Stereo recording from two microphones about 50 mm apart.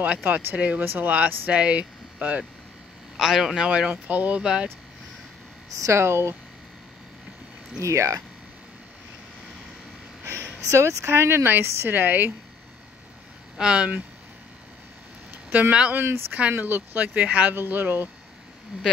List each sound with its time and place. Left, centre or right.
0.0 s speech: right
3.2 s a man's voice: centre
3.9 s speech: right
4.4 s speech: centre
5.8 s speech: right
7.8 s speech: right
10.2 s a sound: right
11.1 s speech: right
12.0 s speech: right
13.6 s a man's voice: centre
15.9 s speech: right
17.6 s speech: right